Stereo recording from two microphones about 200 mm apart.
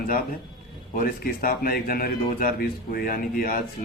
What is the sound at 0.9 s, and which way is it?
A man's voice, 45° left (ahead or behind).